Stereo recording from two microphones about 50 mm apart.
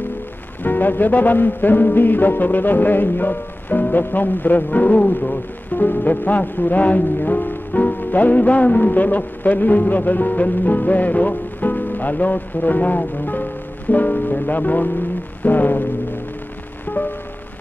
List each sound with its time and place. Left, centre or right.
0.7 s speech: left
15.4 s a sound: left
16.8 s music: left